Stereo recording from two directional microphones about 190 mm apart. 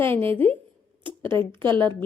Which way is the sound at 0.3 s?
30° right (ahead or behind).